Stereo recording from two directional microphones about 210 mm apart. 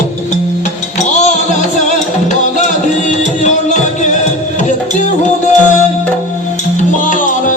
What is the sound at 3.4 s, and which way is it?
Music, 35° left (ahead or behind).